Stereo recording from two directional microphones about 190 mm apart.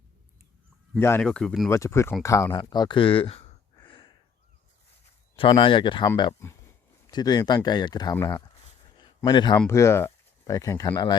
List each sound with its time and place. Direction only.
0.9 s speech: 10° left (ahead or behind)
1.7 s speech: 15° left (ahead or behind)
5.4 s speech: 25° left (ahead or behind)
9.0 s a sound: 25° left (ahead or behind)
9.6 s speech: 15° left (ahead or behind)